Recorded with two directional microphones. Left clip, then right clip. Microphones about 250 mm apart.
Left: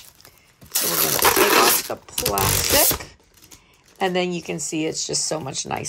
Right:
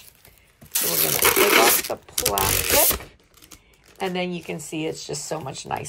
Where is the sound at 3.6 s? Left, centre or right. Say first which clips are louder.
Left 5 dB; centre.